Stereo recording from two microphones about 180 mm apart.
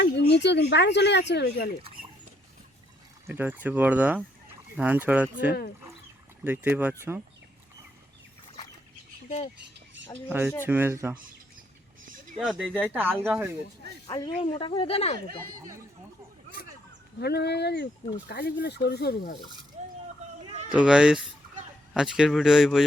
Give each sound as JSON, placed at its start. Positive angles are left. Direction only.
{"t": 0.0, "sound": "speech", "side_deg": 75}
{"t": 3.2, "sound": "speech", "side_deg": -10}
{"t": 10.2, "sound": "speech", "side_deg": -10}
{"t": 12.4, "sound": "speech", "side_deg": 0}
{"t": 14.1, "sound": "speech", "side_deg": 20}
{"t": 16.6, "sound": "a sound", "side_deg": 55}
{"t": 17.2, "sound": "speech", "side_deg": 65}
{"t": 19.8, "sound": "vehicle", "side_deg": -35}
{"t": 20.5, "sound": "a sound", "side_deg": -40}
{"t": 20.7, "sound": "speech", "side_deg": -5}